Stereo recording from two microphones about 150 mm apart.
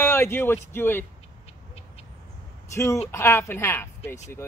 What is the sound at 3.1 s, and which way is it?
Speech, 15° left (ahead or behind).